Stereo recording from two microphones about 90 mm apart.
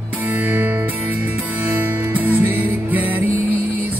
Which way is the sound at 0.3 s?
20° right (ahead or behind).